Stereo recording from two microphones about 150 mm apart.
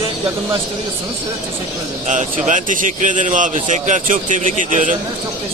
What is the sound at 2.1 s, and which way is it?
A man's voice, 55° right (ahead or behind).